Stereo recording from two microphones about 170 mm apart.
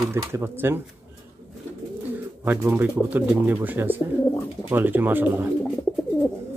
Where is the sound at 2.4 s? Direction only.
15° right (ahead or behind).